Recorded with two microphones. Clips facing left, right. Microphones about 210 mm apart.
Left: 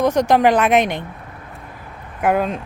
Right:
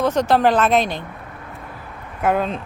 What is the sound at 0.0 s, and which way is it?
Speech, 15° left (ahead or behind).